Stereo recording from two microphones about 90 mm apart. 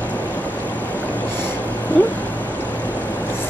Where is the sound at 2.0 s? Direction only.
15° left (ahead or behind).